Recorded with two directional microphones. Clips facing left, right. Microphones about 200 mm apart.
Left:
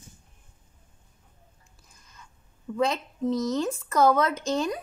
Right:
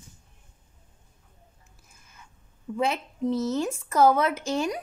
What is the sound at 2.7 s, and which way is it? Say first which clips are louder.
Speech: left 1 dB; 10° right (ahead or behind).